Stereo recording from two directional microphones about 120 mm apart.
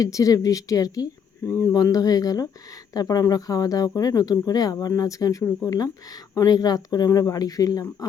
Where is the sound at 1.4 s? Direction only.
20° left (ahead or behind).